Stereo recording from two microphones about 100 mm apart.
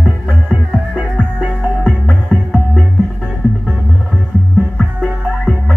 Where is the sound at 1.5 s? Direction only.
5° left (ahead or behind).